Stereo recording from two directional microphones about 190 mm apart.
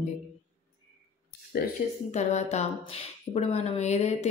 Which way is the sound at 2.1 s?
35° left (ahead or behind).